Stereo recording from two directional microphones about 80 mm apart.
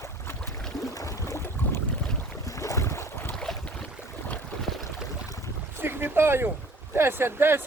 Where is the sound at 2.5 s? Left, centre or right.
Left.